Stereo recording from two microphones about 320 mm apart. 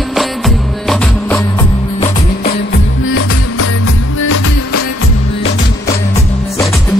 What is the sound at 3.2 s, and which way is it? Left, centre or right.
Music, left.